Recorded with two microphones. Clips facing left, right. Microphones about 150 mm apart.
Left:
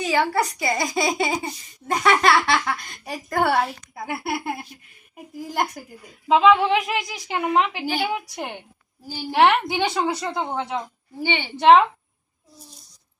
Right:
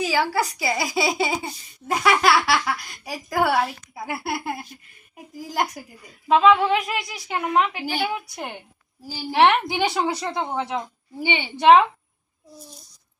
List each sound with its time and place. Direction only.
0.0 s a child's voice: centre (ahead or behind)
6.2 s a woman's voice: 15° left (ahead or behind)
7.5 s a woman's voice: 20° left (ahead or behind)
9.3 s a child's voice: centre (ahead or behind)
11.2 s a woman's voice: 15° right (ahead or behind)
11.6 s a child's voice: 5° right (ahead or behind)